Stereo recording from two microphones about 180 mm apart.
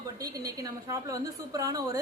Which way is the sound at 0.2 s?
20° right (ahead or behind).